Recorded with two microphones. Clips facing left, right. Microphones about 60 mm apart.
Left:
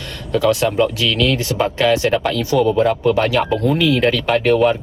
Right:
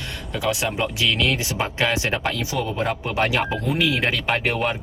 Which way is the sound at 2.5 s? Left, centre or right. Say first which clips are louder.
Left 11 dB; centre.